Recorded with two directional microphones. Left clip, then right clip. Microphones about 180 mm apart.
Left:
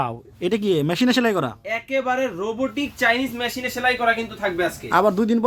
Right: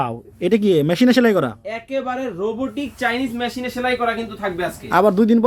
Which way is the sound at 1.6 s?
65° left (ahead or behind).